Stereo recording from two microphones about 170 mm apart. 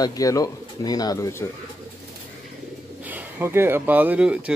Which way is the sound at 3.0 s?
10° right (ahead or behind).